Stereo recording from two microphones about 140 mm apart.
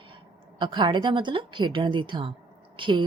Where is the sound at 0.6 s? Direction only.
35° right (ahead or behind).